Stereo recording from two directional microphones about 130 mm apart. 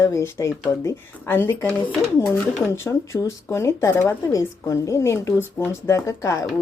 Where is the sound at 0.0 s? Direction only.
20° left (ahead or behind).